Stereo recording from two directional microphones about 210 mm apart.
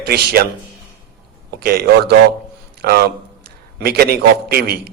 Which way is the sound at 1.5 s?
50° right (ahead or behind).